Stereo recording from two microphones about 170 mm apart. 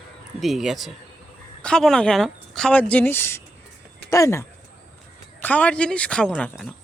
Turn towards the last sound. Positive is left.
turn(degrees=5)  # may be behind; listen again after turning